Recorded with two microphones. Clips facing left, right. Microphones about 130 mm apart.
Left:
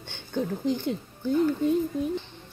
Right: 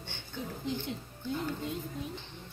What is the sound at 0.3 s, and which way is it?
Speech, 50° left (ahead or behind).